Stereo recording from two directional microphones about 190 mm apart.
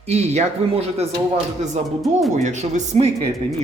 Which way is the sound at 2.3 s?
40° right (ahead or behind).